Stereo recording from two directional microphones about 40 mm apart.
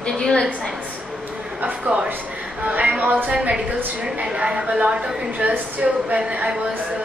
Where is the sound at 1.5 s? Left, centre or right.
Right.